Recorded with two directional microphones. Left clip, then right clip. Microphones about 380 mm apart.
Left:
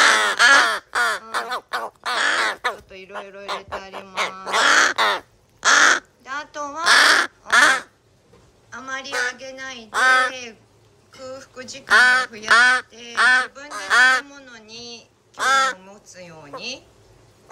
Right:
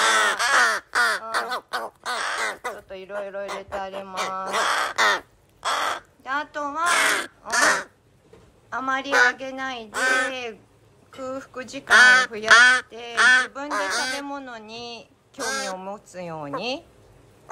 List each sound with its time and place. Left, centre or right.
0.0 s crow: centre
2.4 s speech: centre
4.6 s crow: left
4.9 s crow: centre
5.6 s crow: left
6.2 s a sound: centre
7.0 s crow: centre
8.6 s a woman's voice: centre
11.2 s speech: centre
11.8 s speech: centre
13.6 s speech: centre